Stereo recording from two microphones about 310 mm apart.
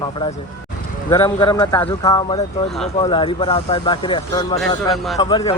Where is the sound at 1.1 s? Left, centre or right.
Centre.